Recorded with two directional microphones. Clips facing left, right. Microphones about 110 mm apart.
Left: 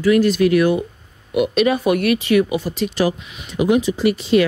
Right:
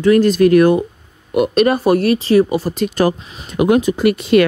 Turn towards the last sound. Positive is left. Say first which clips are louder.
# right 3 dB
turn(degrees=-60)  # may be behind; listen again after turning